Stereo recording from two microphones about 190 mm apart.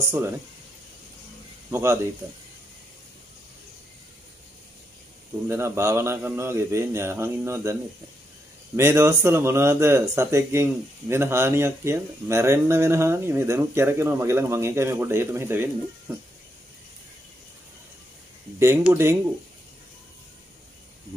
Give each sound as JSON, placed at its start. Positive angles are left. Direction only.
{"t": 0.0, "sound": "speech", "side_deg": -15}
{"t": 1.7, "sound": "speech", "side_deg": -15}
{"t": 5.5, "sound": "speech", "side_deg": -15}
{"t": 8.7, "sound": "speech", "side_deg": -15}
{"t": 18.6, "sound": "speech", "side_deg": -15}